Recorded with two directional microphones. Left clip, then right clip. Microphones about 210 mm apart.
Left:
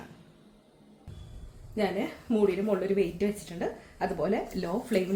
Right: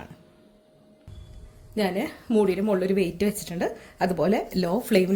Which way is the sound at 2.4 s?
45° right (ahead or behind).